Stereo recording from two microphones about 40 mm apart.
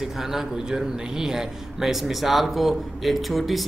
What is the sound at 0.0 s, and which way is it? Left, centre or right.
A man's voice, centre.